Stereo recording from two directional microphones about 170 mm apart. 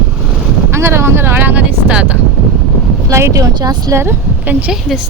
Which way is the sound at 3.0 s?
15° right (ahead or behind).